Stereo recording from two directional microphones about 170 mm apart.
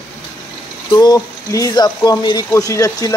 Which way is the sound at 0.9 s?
25° left (ahead or behind).